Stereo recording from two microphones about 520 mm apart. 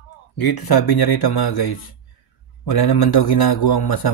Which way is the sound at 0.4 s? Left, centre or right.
Left.